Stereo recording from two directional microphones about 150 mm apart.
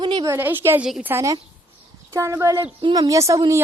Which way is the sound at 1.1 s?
20° right (ahead or behind).